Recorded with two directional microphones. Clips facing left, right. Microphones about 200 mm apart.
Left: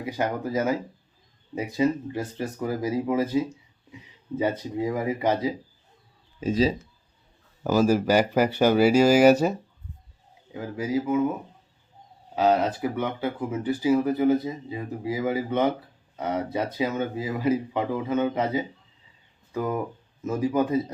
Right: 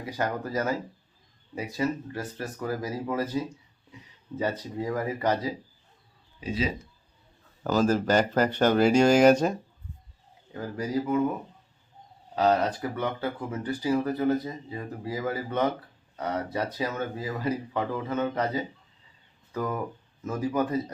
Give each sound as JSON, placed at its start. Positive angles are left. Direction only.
{"t": 0.0, "sound": "speech", "side_deg": 10}
{"t": 6.4, "sound": "speech", "side_deg": 45}
{"t": 7.6, "sound": "speech", "side_deg": 10}